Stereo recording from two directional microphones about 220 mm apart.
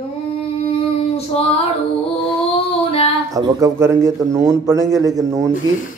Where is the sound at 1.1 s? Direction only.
30° left (ahead or behind).